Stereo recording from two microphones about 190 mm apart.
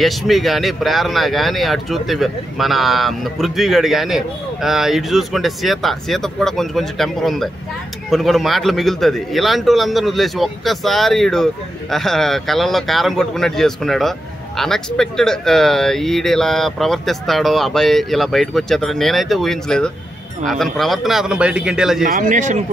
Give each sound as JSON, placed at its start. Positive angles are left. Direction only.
{"t": 0.0, "sound": "speech", "side_deg": 0}
{"t": 22.0, "sound": "speech", "side_deg": -45}